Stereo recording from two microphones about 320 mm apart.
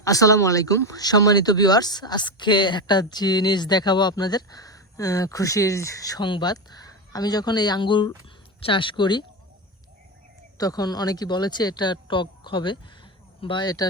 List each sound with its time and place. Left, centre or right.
0.0 s speech: centre
10.6 s speech: centre